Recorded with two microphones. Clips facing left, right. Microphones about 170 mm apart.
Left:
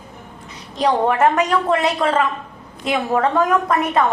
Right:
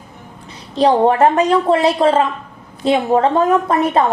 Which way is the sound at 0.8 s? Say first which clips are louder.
Right 4 dB; 30° right (ahead or behind).